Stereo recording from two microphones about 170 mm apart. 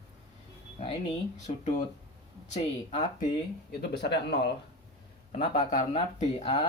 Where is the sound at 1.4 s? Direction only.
45° left (ahead or behind).